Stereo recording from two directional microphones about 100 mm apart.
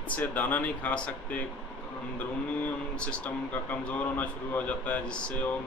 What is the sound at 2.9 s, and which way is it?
Speech, 10° left (ahead or behind).